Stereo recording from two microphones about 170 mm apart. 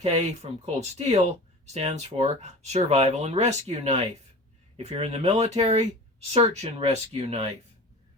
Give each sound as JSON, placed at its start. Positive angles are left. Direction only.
{"t": 0.0, "sound": "speech", "side_deg": -40}